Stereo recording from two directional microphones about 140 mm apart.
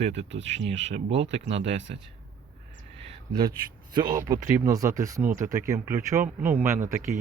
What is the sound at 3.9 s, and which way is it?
Speech, 30° right (ahead or behind).